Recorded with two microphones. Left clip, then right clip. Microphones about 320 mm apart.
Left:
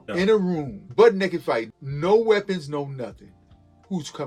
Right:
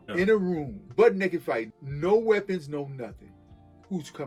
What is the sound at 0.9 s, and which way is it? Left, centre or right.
A man's voice, centre.